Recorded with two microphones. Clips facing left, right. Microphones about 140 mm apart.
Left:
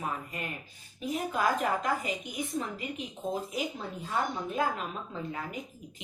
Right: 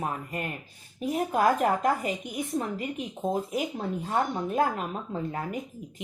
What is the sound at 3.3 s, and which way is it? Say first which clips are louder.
Speech: right 4 dB; 50° right (ahead or behind).